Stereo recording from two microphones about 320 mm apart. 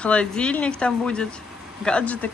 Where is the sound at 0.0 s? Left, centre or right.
Centre.